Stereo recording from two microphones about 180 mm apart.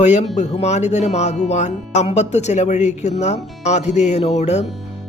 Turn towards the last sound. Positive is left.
turn(degrees=40)  # may be behind; listen again after turning